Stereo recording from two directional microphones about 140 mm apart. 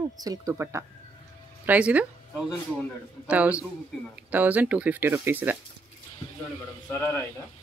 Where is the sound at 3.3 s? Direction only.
10° right (ahead or behind).